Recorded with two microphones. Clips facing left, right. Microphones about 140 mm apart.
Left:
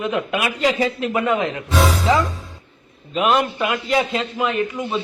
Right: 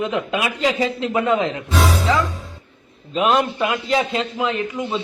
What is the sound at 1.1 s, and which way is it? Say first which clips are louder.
Speech: right 2 dB; 5° left (ahead or behind).